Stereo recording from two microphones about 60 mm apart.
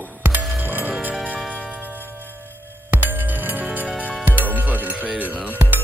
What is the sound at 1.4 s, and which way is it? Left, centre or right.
Music, left.